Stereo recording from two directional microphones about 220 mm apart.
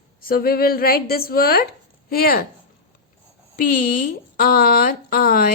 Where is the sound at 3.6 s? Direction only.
40° left (ahead or behind).